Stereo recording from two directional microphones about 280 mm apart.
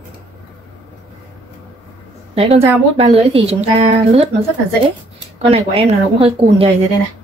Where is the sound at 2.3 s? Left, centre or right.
Centre.